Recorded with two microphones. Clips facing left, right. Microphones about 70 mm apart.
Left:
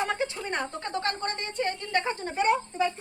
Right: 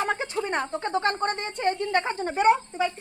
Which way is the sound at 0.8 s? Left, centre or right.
Right.